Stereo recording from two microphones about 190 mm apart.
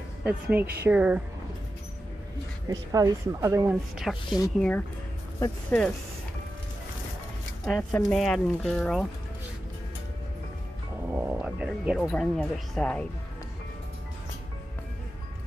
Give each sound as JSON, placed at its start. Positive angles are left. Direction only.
{"t": 0.2, "sound": "speech", "side_deg": -10}
{"t": 2.7, "sound": "speech", "side_deg": -20}
{"t": 4.0, "sound": "speech", "side_deg": 0}
{"t": 7.6, "sound": "speech", "side_deg": 5}
{"t": 11.1, "sound": "a sound", "side_deg": -10}
{"t": 12.1, "sound": "speech", "side_deg": 5}